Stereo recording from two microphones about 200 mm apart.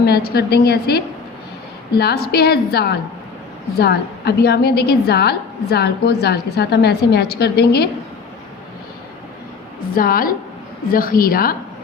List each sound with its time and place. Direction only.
0.0 s a woman's voice: 50° left (ahead or behind)
9.9 s a woman's voice: 45° left (ahead or behind)